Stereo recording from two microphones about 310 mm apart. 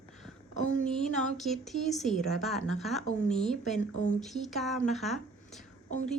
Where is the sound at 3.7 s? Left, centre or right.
Left.